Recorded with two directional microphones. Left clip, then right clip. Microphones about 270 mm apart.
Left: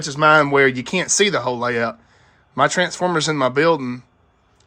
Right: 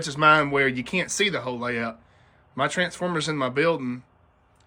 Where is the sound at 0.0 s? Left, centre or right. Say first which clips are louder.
Left 5 dB; centre.